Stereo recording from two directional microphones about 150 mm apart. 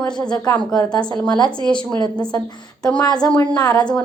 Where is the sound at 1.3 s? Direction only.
30° left (ahead or behind).